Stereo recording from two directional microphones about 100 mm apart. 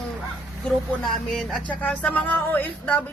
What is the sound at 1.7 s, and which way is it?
A man's voice, 15° left (ahead or behind).